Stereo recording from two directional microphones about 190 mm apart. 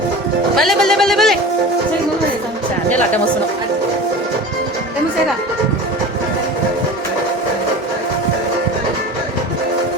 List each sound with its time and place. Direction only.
0.5 s speech: centre (ahead or behind)